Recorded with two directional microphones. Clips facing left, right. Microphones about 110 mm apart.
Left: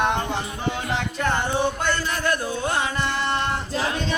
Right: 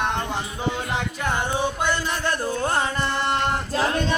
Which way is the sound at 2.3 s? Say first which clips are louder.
Right 1 dB; 40° right (ahead or behind).